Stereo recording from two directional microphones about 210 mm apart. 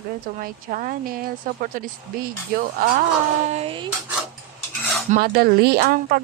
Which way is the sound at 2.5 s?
40° right (ahead or behind).